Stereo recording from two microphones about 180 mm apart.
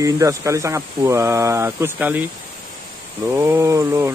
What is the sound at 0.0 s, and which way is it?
Speech, 15° right (ahead or behind).